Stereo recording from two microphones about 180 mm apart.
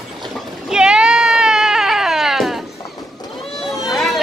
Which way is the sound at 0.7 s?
5° right (ahead or behind).